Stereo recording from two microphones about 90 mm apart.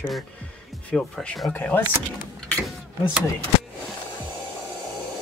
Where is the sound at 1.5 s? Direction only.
20° left (ahead or behind).